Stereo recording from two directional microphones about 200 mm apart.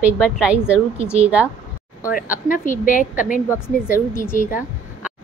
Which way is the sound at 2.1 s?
45° left (ahead or behind).